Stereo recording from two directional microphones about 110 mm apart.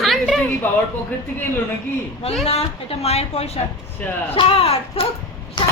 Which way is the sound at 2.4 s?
65° left (ahead or behind).